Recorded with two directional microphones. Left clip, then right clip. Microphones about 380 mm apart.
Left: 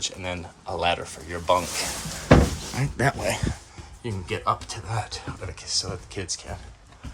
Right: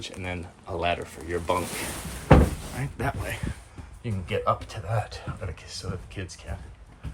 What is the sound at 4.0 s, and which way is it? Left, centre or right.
Speech, centre.